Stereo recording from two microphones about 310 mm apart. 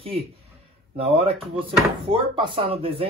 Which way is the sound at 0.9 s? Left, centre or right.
Centre.